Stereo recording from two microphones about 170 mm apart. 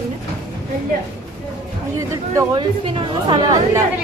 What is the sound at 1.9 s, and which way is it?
Speech, 20° right (ahead or behind).